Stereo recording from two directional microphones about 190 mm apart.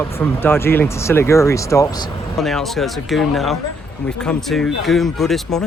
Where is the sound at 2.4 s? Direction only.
Centre (ahead or behind).